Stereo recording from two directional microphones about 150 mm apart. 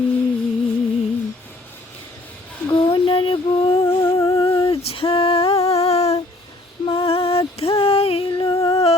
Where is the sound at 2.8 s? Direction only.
35° left (ahead or behind).